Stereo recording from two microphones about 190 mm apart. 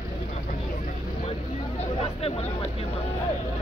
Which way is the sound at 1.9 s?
30° left (ahead or behind).